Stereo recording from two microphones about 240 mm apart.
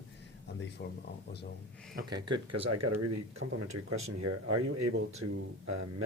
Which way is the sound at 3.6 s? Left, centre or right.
Right.